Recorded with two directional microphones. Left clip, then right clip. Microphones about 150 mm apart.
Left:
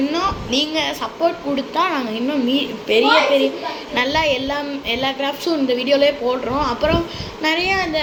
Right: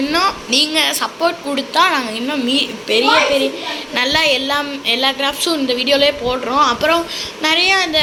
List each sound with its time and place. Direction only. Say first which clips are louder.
0.1 s a sound: right 5 dB; 5° right (ahead or behind)
0.7 s a woman's voice: right 5 dB; centre (ahead or behind)
3.9 s a woman's voice: right 3 dB; centre (ahead or behind)